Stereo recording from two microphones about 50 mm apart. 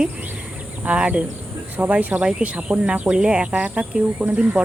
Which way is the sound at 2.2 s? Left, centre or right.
Centre.